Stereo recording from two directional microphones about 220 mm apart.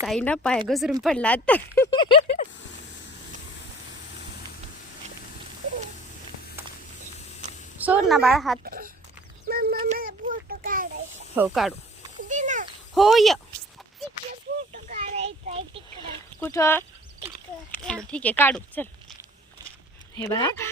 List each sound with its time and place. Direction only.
0.0 s a woman's voice: 5° left (ahead or behind); by 2.1 s 20° left (ahead or behind)
2.2 s a sound: 35° left (ahead or behind)
7.8 s a woman's voice: 5° right (ahead or behind)
8.6 s speech: 40° right (ahead or behind)
9.5 s a sound: 45° right (ahead or behind)
11.3 s a woman's voice: centre (ahead or behind)
12.3 s a sound: 35° right (ahead or behind)
12.9 s a woman's voice: centre (ahead or behind)
14.8 s a sound: 30° right (ahead or behind)
16.4 s speech: 10° left (ahead or behind)
17.8 s speech: 5° left (ahead or behind)
20.2 s speech: 15° left (ahead or behind)